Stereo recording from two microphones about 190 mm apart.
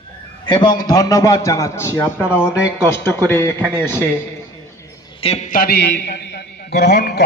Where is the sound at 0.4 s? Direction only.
25° left (ahead or behind).